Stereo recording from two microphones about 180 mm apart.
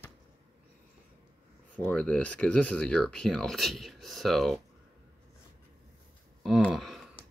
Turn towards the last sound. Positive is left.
turn(degrees=0)  # may be behind; listen again after turning